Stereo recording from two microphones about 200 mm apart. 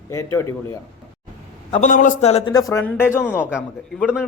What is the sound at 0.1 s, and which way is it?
Speech, 15° left (ahead or behind).